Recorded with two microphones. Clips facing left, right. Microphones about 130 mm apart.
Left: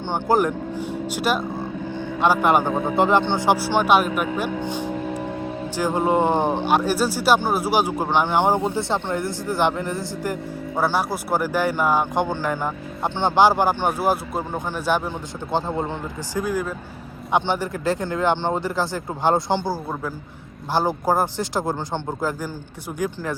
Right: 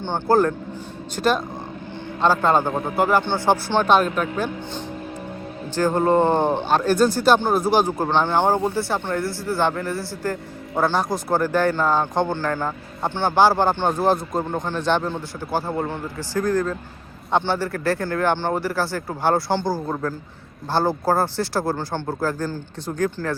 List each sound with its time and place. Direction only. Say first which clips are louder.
0.0 s speech: right 1 dB; 15° left (ahead or behind)